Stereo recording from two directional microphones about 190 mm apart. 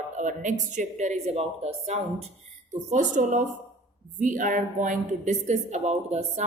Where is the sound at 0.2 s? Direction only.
40° right (ahead or behind).